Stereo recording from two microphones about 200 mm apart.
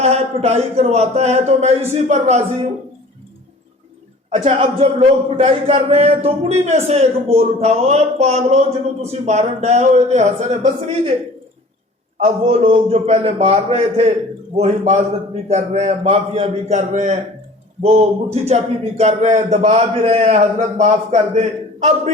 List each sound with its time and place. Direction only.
0.0 s a man's voice: 30° right (ahead or behind)
4.4 s a man's voice: 25° right (ahead or behind)
12.1 s a man's voice: 30° right (ahead or behind)